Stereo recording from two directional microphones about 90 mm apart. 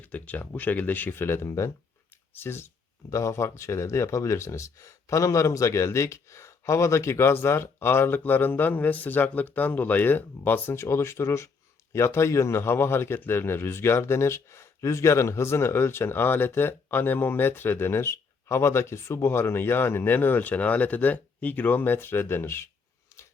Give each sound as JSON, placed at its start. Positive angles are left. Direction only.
{"t": 0.0, "sound": "a man's voice", "side_deg": 20}